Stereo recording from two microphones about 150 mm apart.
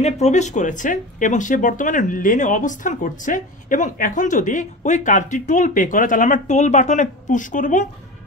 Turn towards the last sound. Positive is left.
turn(degrees=60)  # may be behind; listen again after turning